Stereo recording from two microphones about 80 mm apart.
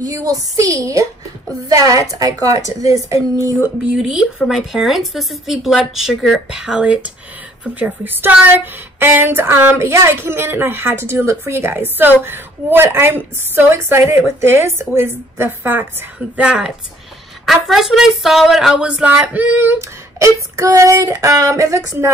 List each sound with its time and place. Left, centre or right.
0.0 s a woman's voice: right
3.9 s a woman's voice: centre; by 15.9 s right
16.3 s a woman's voice: centre; by 22.1 s right